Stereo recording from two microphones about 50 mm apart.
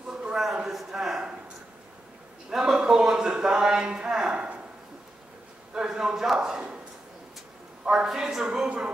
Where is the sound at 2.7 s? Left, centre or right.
Centre.